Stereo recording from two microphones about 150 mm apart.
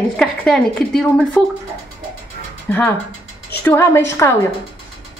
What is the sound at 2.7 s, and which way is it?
A woman's voice, 15° left (ahead or behind).